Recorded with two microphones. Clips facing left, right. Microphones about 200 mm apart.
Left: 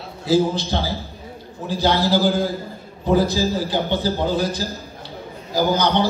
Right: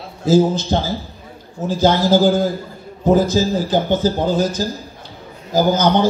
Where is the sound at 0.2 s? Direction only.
45° right (ahead or behind).